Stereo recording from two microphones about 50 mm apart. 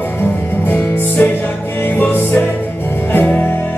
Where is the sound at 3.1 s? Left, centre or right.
Left.